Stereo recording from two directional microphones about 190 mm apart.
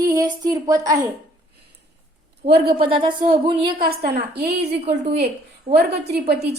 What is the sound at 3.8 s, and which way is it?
A woman's voice, 55° right (ahead or behind).